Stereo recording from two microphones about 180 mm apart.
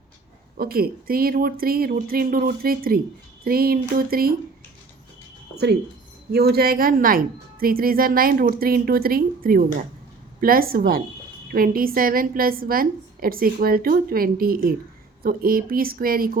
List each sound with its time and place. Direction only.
0.5 s speech: 55° right (ahead or behind)
5.5 s a sound: 10° left (ahead or behind)
6.3 s a woman's voice: 60° right (ahead or behind)